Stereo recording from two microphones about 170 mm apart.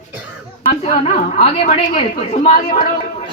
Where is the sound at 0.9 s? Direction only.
45° left (ahead or behind).